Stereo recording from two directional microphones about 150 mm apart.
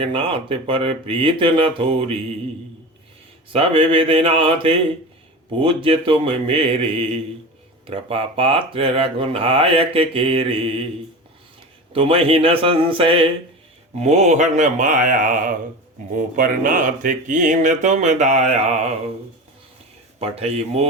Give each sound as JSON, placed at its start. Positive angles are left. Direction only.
{"t": 0.0, "sound": "speech", "side_deg": -35}
{"t": 3.5, "sound": "speech", "side_deg": -40}
{"t": 11.9, "sound": "speech", "side_deg": -40}
{"t": 14.0, "sound": "speech", "side_deg": -50}
{"t": 20.1, "sound": "speech", "side_deg": -40}